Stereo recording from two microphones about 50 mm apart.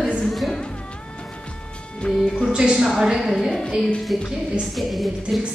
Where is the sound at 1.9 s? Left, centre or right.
Centre.